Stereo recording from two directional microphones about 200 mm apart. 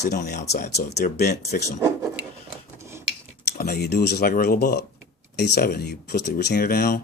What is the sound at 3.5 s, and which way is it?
Speech, 50° left (ahead or behind).